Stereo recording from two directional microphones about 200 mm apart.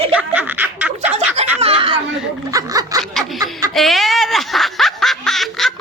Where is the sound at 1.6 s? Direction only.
30° right (ahead or behind).